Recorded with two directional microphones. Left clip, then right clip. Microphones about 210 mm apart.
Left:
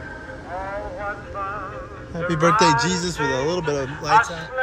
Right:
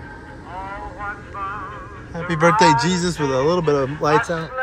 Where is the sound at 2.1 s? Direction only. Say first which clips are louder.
Right 2 dB; 15° left (ahead or behind).